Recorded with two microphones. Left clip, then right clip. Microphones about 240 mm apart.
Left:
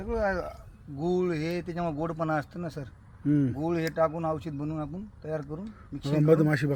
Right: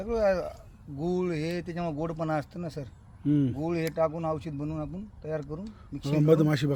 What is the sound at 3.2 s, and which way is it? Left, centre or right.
Speech, centre.